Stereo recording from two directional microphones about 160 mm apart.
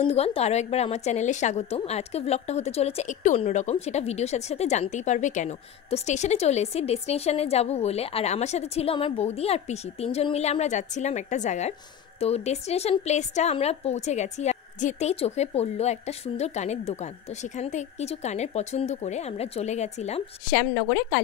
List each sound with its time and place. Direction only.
0.0 s a woman's voice: 40° left (ahead or behind)
20.5 s a woman's voice: 75° left (ahead or behind)